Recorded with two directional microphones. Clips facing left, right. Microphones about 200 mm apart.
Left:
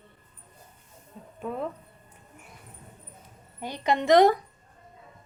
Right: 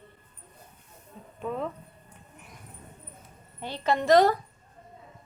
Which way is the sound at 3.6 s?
15° left (ahead or behind).